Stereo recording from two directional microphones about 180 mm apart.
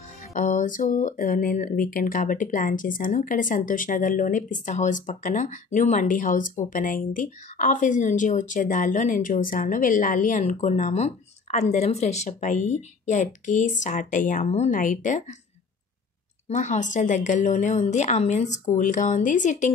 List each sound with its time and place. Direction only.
0.3 s speech: 45° left (ahead or behind)
16.4 s speech: 40° left (ahead or behind)